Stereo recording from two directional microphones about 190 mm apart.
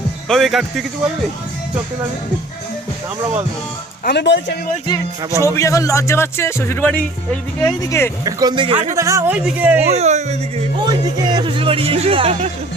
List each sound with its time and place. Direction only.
0.3 s speech: centre (ahead or behind)
4.0 s speech: 65° left (ahead or behind)
5.4 s speech: 15° left (ahead or behind)
8.2 s speech: 20° right (ahead or behind)
9.0 s speech: 15° right (ahead or behind)
9.9 s speech: 35° right (ahead or behind)
10.8 s speech: 20° right (ahead or behind)